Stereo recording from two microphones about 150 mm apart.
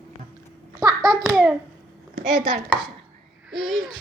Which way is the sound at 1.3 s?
5° right (ahead or behind).